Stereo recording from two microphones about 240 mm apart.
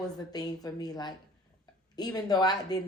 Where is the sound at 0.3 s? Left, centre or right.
Centre.